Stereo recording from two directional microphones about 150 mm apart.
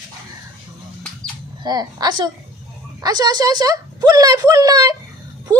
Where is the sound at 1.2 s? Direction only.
25° right (ahead or behind).